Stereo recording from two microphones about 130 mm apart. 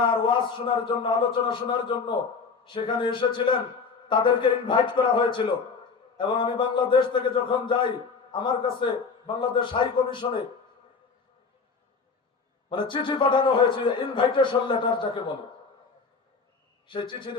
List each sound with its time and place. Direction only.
0.0 s a man's voice: 40° left (ahead or behind)
12.7 s a man's voice: 40° left (ahead or behind)
16.9 s a man's voice: 40° left (ahead or behind)